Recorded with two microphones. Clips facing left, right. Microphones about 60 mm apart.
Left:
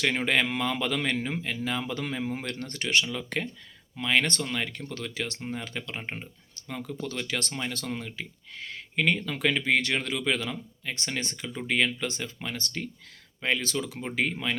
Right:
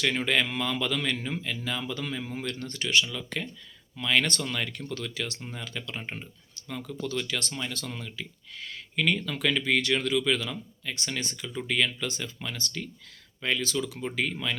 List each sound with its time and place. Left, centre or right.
0.0 s speech: left
3.0 s speech: left
3.9 s speech: left
7.3 s speech: left
7.9 s speech: left
11.4 s speech: left